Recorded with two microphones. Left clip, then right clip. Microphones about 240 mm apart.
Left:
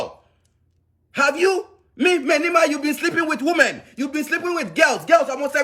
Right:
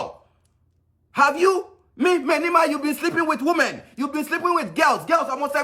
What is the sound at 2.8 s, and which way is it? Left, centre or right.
Speech, centre.